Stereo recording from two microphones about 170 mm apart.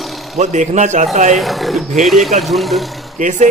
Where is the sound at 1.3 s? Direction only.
Centre (ahead or behind).